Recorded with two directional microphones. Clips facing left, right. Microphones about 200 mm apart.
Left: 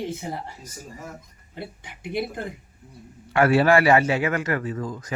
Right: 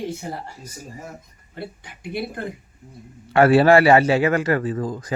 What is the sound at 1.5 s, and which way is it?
Speech, 20° left (ahead or behind).